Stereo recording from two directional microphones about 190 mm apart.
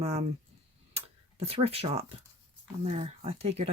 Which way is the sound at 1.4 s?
30° right (ahead or behind).